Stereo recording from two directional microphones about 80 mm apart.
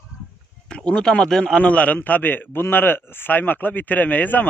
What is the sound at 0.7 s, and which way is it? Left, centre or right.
A man's voice, centre.